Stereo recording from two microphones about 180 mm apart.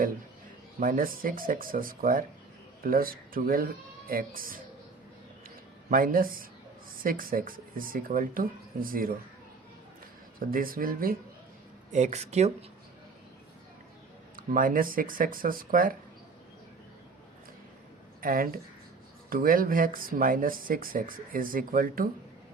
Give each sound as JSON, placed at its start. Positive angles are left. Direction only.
{"t": 0.8, "sound": "speech", "side_deg": -50}
{"t": 5.9, "sound": "speech", "side_deg": -50}
{"t": 10.4, "sound": "speech", "side_deg": -50}
{"t": 11.9, "sound": "speech", "side_deg": -40}
{"t": 14.3, "sound": "speech", "side_deg": -50}
{"t": 18.2, "sound": "speech", "side_deg": -55}